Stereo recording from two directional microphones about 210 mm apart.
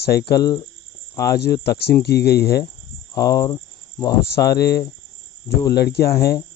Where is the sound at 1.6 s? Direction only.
50° left (ahead or behind).